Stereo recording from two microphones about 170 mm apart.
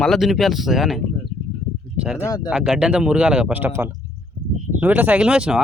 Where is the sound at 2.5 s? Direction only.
5° right (ahead or behind).